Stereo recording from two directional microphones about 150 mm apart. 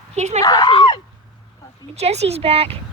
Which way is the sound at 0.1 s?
45° right (ahead or behind).